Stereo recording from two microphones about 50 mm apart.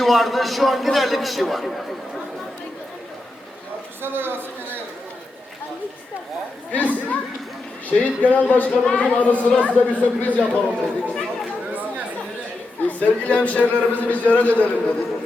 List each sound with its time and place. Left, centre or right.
0.0 s a man's voice: centre
4.0 s a woman's voice: right
6.7 s a man's voice: left
8.7 s a man's voice: centre
10.4 s speech: right
11.7 s chatter: right
12.9 s a man's voice: left